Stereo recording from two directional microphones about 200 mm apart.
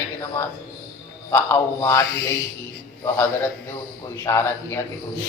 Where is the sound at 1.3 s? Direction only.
15° left (ahead or behind).